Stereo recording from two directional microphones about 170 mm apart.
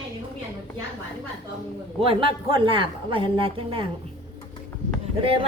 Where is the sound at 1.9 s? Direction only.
30° right (ahead or behind).